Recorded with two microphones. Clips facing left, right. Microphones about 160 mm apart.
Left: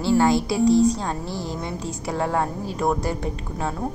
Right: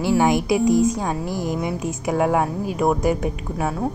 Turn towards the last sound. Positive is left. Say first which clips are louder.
# right 3 dB
turn(degrees=-15)  # may be behind; listen again after turning